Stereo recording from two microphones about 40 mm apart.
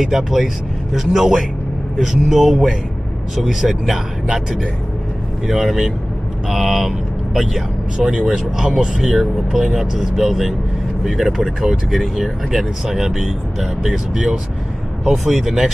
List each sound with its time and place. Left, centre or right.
0.0 s speech: centre
8.0 s speech: right
9.0 s speech: centre
11.6 s speech: centre